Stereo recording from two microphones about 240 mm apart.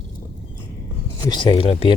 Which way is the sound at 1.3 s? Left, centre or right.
Centre.